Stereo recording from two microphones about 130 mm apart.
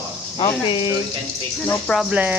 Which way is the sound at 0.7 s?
40° left (ahead or behind).